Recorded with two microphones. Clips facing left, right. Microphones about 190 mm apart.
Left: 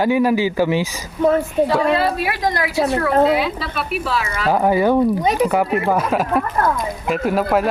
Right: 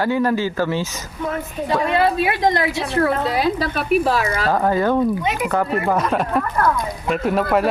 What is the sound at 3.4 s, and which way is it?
Speech, 45° right (ahead or behind).